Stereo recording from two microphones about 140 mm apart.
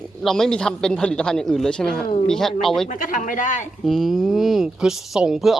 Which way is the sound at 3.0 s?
70° left (ahead or behind).